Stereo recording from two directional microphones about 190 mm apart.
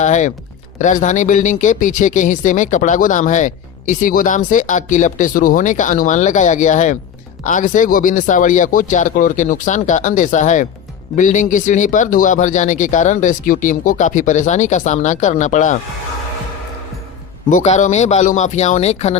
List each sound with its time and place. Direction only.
0.0 s speech: 40° left (ahead or behind)
17.5 s speech: 40° left (ahead or behind)